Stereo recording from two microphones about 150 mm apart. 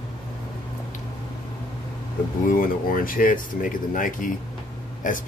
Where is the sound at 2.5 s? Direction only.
65° left (ahead or behind).